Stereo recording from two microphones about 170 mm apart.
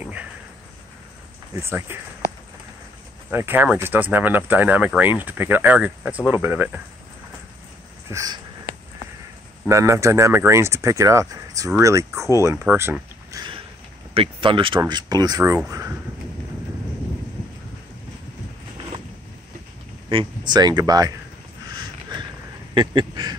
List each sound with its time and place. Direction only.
0.0 s cricket: 10° right (ahead or behind)
1.6 s speech: 15° right (ahead or behind)
3.3 s speech: 10° right (ahead or behind)
8.1 s speech: 20° right (ahead or behind)
9.7 s speech: 15° right (ahead or behind)
13.3 s a sound: 25° right (ahead or behind)
14.1 s speech: 30° right (ahead or behind)
20.1 s speech: 30° right (ahead or behind)
22.8 s speech: 25° right (ahead or behind)